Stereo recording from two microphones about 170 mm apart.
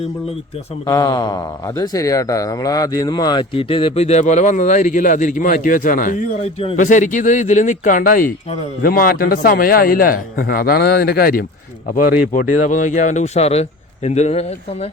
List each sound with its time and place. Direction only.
0.9 s speech: 20° left (ahead or behind); by 6.7 s 35° left (ahead or behind)
6.7 s a man's voice: 50° left (ahead or behind)
11.9 s speech: 50° left (ahead or behind)